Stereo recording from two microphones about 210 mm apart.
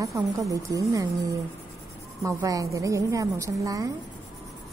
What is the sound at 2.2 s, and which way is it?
A woman's voice, 15° right (ahead or behind).